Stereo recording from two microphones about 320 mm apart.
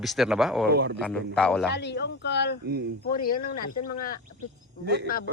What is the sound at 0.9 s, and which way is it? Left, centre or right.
Speech, centre.